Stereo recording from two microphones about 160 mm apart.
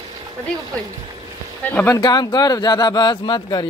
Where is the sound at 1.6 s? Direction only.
10° left (ahead or behind).